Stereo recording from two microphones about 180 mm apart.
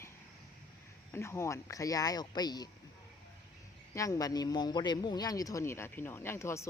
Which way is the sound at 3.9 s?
20° left (ahead or behind).